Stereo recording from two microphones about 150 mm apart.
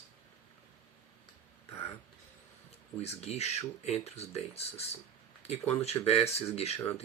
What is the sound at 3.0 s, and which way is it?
Speech, 45° left (ahead or behind).